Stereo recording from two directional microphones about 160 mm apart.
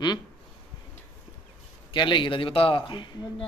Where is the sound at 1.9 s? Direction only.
30° left (ahead or behind).